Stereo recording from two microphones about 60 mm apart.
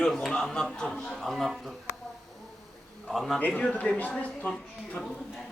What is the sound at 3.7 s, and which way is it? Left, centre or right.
Speech, left.